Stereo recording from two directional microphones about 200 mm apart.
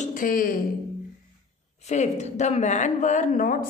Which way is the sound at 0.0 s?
40° left (ahead or behind).